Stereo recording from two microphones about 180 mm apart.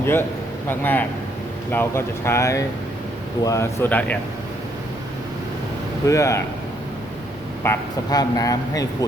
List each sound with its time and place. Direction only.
0.0 s speech: 15° left (ahead or behind)
6.1 s speech: 15° left (ahead or behind)
7.6 s speech: 15° left (ahead or behind)